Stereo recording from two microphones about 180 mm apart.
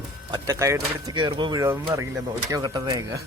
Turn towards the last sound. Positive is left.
turn(degrees=-20)  # may be behind; listen again after turning